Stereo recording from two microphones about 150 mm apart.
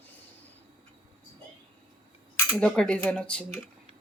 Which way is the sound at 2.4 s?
10° left (ahead or behind).